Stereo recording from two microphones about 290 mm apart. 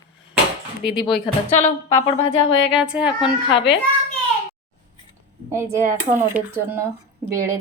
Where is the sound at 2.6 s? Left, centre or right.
Centre.